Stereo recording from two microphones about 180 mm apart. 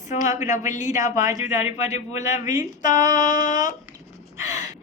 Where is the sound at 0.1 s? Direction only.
40° left (ahead or behind).